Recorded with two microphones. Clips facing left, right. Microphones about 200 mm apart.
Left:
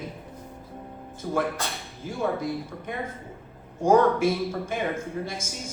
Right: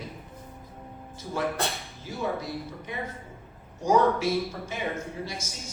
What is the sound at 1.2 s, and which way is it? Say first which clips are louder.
Speech: left 6 dB; 65° left (ahead or behind).